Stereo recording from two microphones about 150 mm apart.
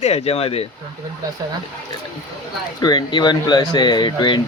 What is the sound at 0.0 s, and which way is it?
Speech, 40° left (ahead or behind).